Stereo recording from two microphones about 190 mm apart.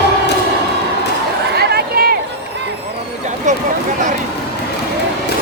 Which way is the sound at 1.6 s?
55° right (ahead or behind).